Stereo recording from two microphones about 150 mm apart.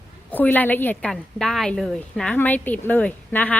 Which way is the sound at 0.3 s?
10° left (ahead or behind).